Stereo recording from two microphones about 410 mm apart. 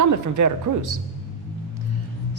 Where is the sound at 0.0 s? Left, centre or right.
Right.